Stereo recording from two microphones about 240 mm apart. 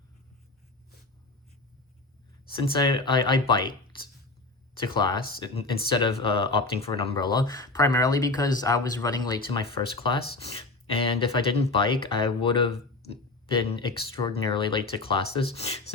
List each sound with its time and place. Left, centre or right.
2.6 s speech: centre
4.7 s speech: centre